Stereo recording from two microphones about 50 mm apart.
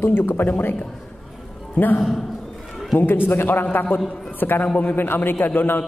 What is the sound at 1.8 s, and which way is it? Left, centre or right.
Speech, left.